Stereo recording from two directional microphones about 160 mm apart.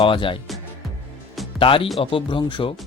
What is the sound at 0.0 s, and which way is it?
Speech, 30° left (ahead or behind).